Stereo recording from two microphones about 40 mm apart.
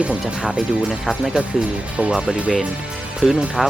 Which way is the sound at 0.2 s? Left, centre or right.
Right.